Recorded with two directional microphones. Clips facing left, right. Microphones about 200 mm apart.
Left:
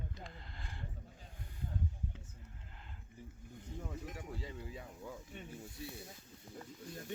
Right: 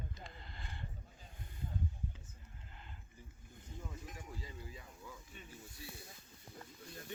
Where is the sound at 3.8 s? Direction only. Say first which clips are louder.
Left 4 dB; 65° left (ahead or behind).